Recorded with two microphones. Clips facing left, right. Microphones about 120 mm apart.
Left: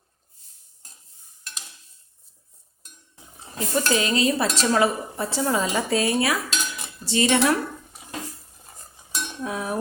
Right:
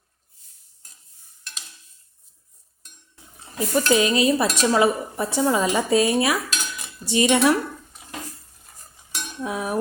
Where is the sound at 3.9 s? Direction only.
20° right (ahead or behind).